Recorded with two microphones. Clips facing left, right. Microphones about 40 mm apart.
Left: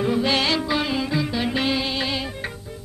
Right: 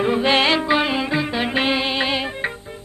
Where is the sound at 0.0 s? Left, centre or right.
Right.